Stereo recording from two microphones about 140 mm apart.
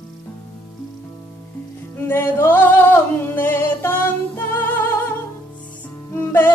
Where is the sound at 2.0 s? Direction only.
15° left (ahead or behind).